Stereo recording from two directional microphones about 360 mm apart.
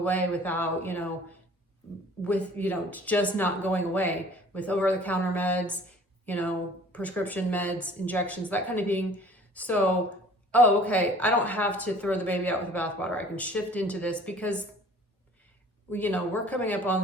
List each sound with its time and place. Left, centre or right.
0.0 s speech: centre
2.2 s speech: centre
15.9 s speech: centre